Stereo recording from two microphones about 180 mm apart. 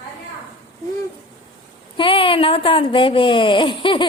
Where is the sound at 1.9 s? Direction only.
30° left (ahead or behind).